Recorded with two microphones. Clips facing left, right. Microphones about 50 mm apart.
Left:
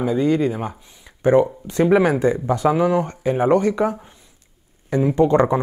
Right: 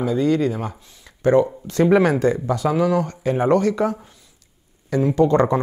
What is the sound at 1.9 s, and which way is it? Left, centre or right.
Speech, centre.